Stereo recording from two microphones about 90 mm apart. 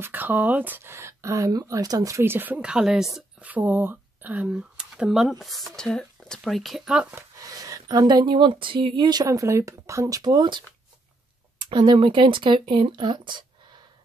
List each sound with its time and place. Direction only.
0.0 s speech: 20° right (ahead or behind); by 2.2 s 40° right (ahead or behind)
2.2 s a woman's voice: 20° right (ahead or behind); by 3.3 s 5° right (ahead or behind)
3.3 s speech: 15° right (ahead or behind); by 6.9 s centre (ahead or behind)
7.3 s speech: 40° right (ahead or behind); by 13.5 s 60° right (ahead or behind)